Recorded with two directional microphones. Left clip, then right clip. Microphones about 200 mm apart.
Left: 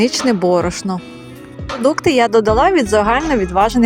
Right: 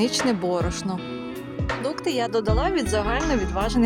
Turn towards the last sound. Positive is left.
turn(degrees=25)  # may be behind; listen again after turning